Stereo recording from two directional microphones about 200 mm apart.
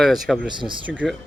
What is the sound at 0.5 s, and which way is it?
Speech, 25° right (ahead or behind).